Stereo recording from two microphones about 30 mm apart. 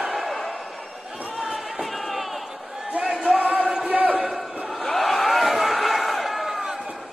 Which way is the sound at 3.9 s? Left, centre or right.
Right.